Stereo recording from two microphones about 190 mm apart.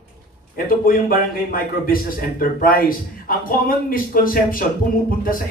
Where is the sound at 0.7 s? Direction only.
50° left (ahead or behind).